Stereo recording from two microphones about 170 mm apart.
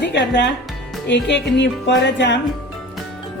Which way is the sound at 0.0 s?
90° left.